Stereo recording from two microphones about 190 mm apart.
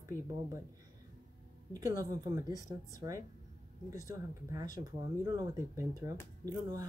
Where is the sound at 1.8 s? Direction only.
20° right (ahead or behind).